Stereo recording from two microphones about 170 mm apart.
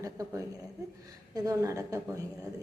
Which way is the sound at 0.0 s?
20° right (ahead or behind).